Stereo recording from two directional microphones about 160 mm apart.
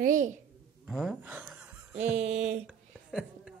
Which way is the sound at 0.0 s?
50° right (ahead or behind).